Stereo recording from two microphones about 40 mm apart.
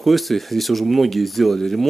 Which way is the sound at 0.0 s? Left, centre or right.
Centre.